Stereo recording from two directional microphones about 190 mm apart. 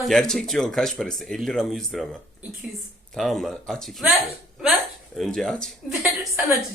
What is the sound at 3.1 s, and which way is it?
A man's voice, centre (ahead or behind).